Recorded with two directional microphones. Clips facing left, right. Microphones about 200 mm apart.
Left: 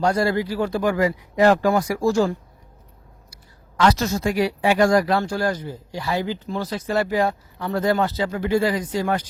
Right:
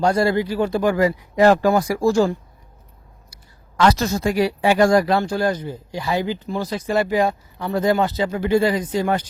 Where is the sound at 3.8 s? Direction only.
35° right (ahead or behind).